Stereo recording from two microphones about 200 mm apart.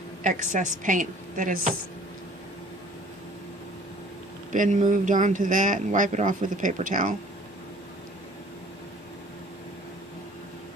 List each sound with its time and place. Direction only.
0.2 s speech: 40° right (ahead or behind)
4.5 s speech: 40° right (ahead or behind)